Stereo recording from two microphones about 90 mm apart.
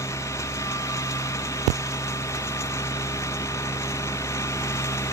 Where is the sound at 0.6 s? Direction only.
35° left (ahead or behind).